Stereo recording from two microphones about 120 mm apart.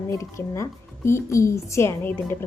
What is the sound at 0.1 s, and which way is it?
A woman's voice, 25° left (ahead or behind).